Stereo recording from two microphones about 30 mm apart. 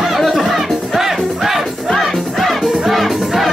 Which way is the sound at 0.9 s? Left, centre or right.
Centre.